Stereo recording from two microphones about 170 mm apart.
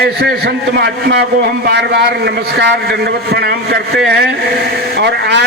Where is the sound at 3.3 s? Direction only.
70° right (ahead or behind).